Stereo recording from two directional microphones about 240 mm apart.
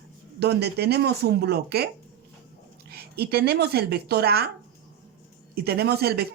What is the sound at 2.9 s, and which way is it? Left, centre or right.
Speech, right.